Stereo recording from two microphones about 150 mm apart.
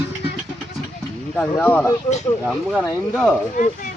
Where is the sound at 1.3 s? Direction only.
10° left (ahead or behind).